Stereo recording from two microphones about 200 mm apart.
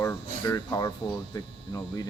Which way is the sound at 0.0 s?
15° left (ahead or behind).